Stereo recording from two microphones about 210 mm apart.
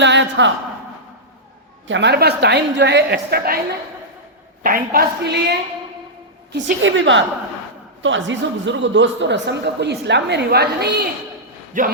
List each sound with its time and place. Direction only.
0.0 s a sound: 60° right (ahead or behind)
1.9 s a woman's voice: 55° right (ahead or behind)
4.6 s a woman's voice: 45° right (ahead or behind)
11.8 s speech: 35° right (ahead or behind)